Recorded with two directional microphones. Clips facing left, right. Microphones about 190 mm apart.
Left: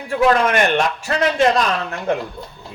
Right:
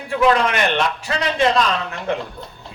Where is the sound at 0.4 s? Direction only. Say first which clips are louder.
Left 3 dB; 45° left (ahead or behind).